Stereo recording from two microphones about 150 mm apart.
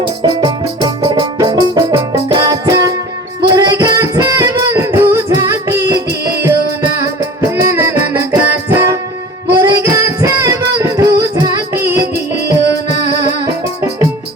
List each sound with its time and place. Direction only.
0.2 s music: 30° right (ahead or behind)
13.1 s music: 25° right (ahead or behind)